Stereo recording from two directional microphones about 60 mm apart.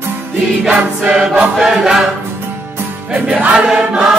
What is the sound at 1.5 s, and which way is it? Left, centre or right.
Choir, centre.